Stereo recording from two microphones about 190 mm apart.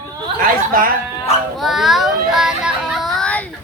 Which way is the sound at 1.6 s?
Centre (ahead or behind).